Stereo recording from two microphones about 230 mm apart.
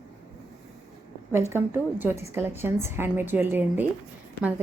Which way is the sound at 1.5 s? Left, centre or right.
Centre.